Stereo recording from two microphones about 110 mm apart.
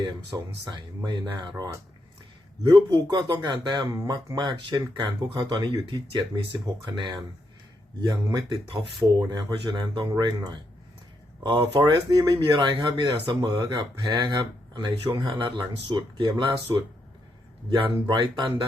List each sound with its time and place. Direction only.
0.0 s speech: 40° right (ahead or behind)
2.7 s speech: 40° right (ahead or behind)
3.9 s speech: 30° right (ahead or behind)
4.4 s speech: 40° right (ahead or behind)
18.1 s speech: 40° right (ahead or behind)